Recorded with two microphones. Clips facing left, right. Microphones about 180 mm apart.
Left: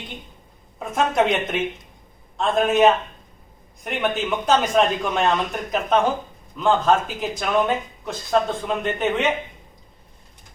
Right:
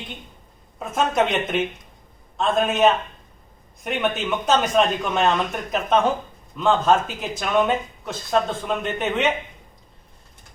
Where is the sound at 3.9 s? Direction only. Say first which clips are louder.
Even; centre (ahead or behind).